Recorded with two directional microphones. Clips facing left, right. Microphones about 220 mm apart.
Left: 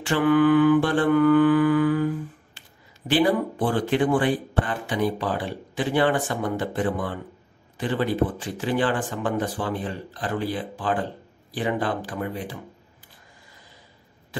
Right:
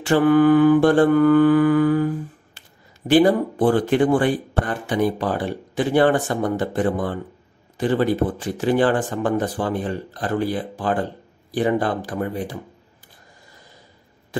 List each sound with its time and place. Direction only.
0.0 s mantra: 40° right (ahead or behind)
3.1 s speech: 45° right (ahead or behind)